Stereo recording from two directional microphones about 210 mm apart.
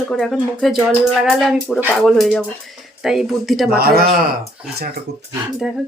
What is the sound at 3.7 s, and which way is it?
Speech, 45° right (ahead or behind).